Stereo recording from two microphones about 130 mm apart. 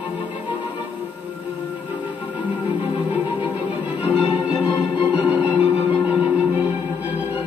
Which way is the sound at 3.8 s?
10° right (ahead or behind).